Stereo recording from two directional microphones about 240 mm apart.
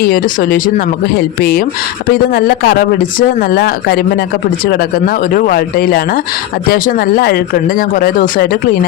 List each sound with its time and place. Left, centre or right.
0.0 s speech: left